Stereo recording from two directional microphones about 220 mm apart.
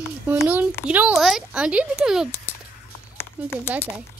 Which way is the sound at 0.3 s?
10° right (ahead or behind).